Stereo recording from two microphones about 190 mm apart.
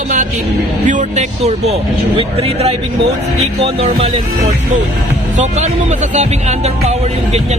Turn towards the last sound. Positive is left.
turn(degrees=-35)  # may be behind; listen again after turning